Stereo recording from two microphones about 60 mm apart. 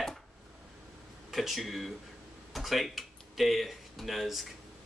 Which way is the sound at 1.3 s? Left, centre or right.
Centre.